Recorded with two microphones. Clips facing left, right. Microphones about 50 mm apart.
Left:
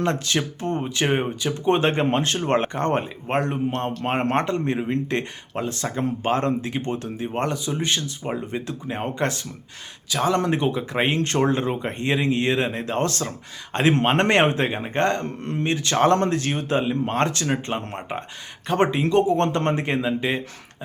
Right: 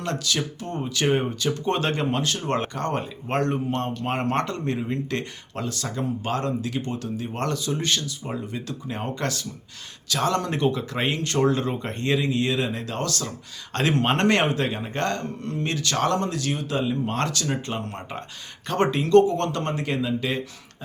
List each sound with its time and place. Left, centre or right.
0.0 s speech: left
3.8 s speech: left
10.1 s speech: centre; by 13.3 s left
14.0 s speech: left
18.7 s speech: centre